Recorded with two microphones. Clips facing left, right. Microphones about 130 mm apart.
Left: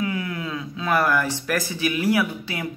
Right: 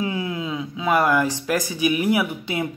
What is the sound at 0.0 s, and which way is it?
Speech, 25° right (ahead or behind).